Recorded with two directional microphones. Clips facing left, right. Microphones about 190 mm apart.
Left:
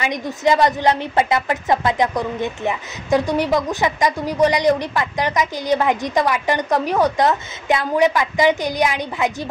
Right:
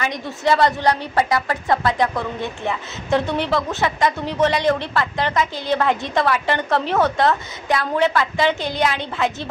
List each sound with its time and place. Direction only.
0.0 s a woman's voice: 15° left (ahead or behind)